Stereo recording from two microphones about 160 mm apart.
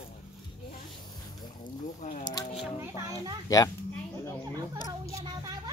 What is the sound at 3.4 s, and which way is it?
Speech, 20° left (ahead or behind).